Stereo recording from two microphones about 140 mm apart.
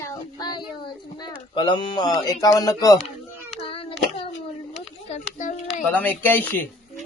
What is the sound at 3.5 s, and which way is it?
Child singing, 40° left (ahead or behind).